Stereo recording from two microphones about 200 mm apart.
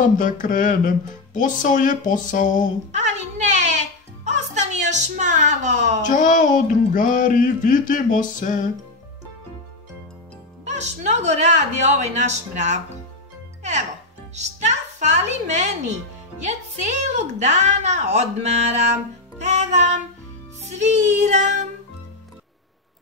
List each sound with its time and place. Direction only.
0.0 s speech: 40° left (ahead or behind)
2.9 s music: 35° right (ahead or behind)
4.9 s speech: 35° right (ahead or behind)
6.0 s speech: 40° left (ahead or behind)
10.6 s speech: 35° right (ahead or behind)
14.3 s a woman's voice: 35° right (ahead or behind)
19.4 s music: 35° right (ahead or behind)
20.7 s speech: 35° right (ahead or behind)